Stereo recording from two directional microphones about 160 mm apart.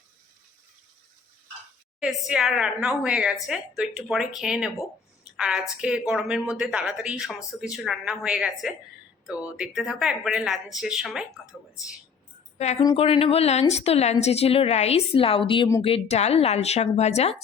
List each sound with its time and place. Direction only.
2.0 s a woman's voice: centre (ahead or behind)
13.0 s a woman's voice: 35° left (ahead or behind)